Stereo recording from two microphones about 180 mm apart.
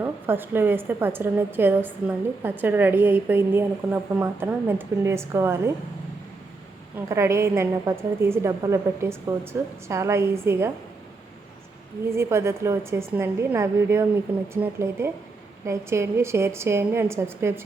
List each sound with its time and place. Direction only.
0.0 s a woman's voice: 10° right (ahead or behind)
7.1 s a woman's voice: 15° right (ahead or behind)
12.0 s a woman's voice: 15° right (ahead or behind)